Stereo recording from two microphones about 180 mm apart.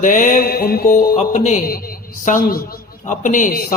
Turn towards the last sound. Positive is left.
turn(degrees=50)  # may be behind; listen again after turning